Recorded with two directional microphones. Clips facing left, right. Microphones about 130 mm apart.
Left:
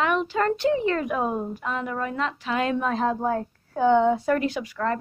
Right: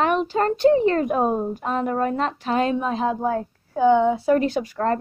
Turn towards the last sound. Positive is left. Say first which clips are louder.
# right 4 dB
turn(degrees=-35)  # may be behind; listen again after turning